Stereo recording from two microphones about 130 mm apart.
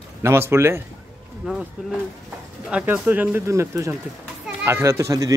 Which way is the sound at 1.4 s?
5° right (ahead or behind).